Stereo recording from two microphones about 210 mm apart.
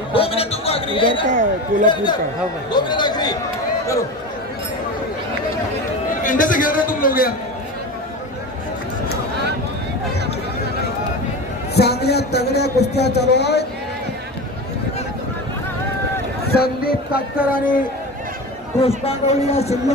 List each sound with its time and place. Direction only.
0.1 s chatter: 25° left (ahead or behind)
1.3 s speech: 35° right (ahead or behind)
2.7 s a man's voice: 20° left (ahead or behind)
6.2 s a man's voice: 40° left (ahead or behind)
11.7 s a man's voice: 50° left (ahead or behind)
16.5 s a man's voice: 45° left (ahead or behind)
18.8 s a man's voice: 30° left (ahead or behind)